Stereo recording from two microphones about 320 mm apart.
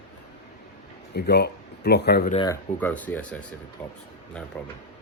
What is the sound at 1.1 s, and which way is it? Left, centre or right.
Speech, left.